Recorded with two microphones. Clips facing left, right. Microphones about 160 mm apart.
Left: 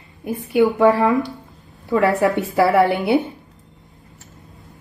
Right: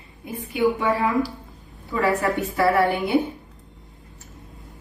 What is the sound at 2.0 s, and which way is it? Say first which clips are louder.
A woman's voice: left 5 dB; 70° left (ahead or behind).